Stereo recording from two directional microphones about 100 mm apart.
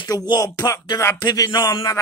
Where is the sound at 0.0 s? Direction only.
40° left (ahead or behind).